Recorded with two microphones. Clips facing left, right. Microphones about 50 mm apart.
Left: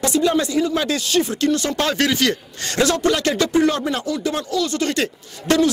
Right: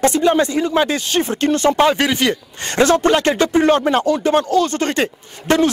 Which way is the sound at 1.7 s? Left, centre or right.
Centre.